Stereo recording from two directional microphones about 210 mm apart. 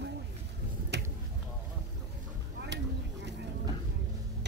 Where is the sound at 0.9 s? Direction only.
55° right (ahead or behind).